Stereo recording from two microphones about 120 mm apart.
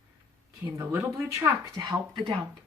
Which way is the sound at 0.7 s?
15° right (ahead or behind).